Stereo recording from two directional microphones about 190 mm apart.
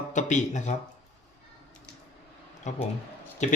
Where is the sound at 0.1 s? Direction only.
40° left (ahead or behind).